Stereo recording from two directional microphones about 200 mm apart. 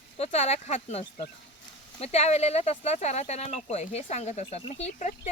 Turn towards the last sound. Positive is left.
turn(degrees=35)  # may be behind; listen again after turning